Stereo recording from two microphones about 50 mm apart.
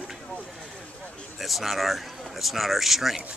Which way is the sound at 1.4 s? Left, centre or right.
Centre.